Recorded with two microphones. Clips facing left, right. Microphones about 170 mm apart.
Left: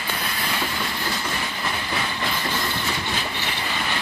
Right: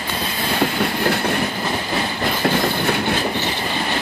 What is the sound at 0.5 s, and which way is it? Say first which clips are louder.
Train: right 12 dB; 60° right (ahead or behind).